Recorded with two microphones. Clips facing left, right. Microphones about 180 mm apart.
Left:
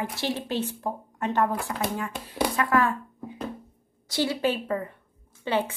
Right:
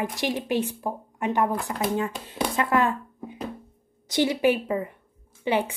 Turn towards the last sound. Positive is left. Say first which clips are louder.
# right 2 dB
turn(degrees=-15)  # may be behind; listen again after turning